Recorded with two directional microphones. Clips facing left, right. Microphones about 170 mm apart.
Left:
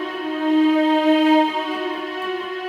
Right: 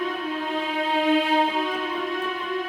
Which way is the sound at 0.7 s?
40° left (ahead or behind).